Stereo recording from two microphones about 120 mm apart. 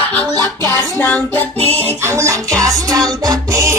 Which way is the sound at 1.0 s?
15° left (ahead or behind).